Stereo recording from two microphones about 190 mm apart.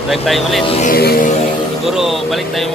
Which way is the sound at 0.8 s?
50° left (ahead or behind).